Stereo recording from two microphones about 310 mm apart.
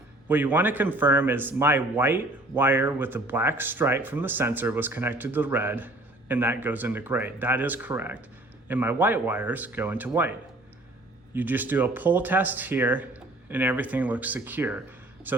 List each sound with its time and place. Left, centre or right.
0.3 s a man's voice: centre
11.3 s a man's voice: centre